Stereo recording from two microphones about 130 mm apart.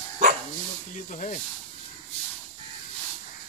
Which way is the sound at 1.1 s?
80° left.